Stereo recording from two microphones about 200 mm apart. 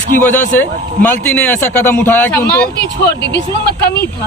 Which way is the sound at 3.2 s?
55° left (ahead or behind).